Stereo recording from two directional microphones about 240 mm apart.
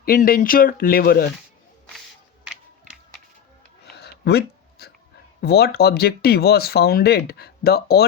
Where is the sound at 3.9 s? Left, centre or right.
Left.